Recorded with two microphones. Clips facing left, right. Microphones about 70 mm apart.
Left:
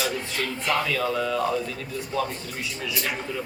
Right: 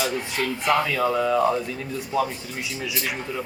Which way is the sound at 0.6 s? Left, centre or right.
Centre.